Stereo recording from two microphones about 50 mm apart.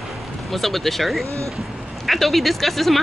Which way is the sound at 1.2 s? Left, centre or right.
Right.